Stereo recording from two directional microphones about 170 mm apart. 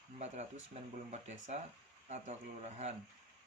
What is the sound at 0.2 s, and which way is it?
Speech, 40° right (ahead or behind).